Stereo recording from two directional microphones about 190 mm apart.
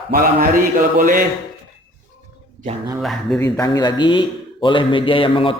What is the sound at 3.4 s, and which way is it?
A man's voice, 20° left (ahead or behind).